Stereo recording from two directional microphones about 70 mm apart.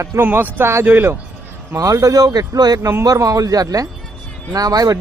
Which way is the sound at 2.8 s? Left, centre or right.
Right.